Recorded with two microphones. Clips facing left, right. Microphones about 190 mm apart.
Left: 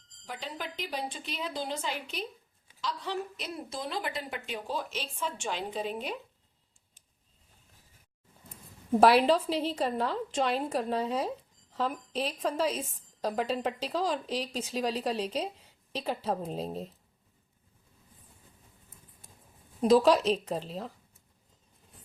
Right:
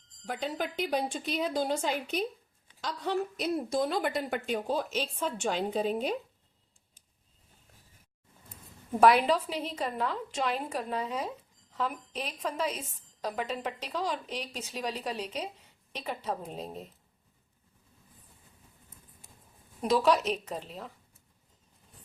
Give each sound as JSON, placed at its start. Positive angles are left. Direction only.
{"t": 0.3, "sound": "a woman's voice", "side_deg": -50}
{"t": 9.0, "sound": "a woman's voice", "side_deg": 30}
{"t": 19.8, "sound": "a woman's voice", "side_deg": 35}